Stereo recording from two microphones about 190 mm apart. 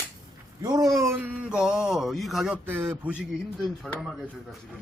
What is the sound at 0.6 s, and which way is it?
Speech, 20° right (ahead or behind).